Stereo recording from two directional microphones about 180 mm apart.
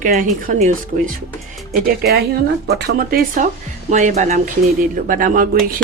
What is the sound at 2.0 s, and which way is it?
Speech, 60° right (ahead or behind).